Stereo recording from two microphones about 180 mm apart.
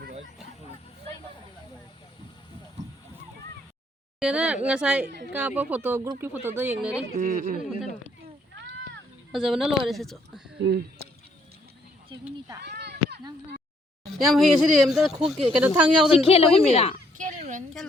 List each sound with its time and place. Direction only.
4.2 s speech: 5° right (ahead or behind)
5.0 s a woman's voice: 65° right (ahead or behind)
5.3 s speech: 10° right (ahead or behind)
7.2 s speech: 50° right (ahead or behind)
8.5 s a sound: 85° right
9.3 s speech: 5° right (ahead or behind)
10.6 s speech: 65° right (ahead or behind)
12.6 s a sound: 65° right (ahead or behind)
14.1 s speech: centre (ahead or behind)
16.2 s a woman's voice: 35° left (ahead or behind)
17.2 s a sound: 45° right (ahead or behind)